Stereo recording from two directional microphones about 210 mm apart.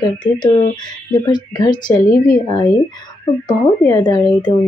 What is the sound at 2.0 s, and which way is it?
Speech, 45° left (ahead or behind).